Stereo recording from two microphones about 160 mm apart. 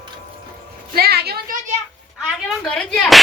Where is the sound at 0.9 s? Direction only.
75° right (ahead or behind).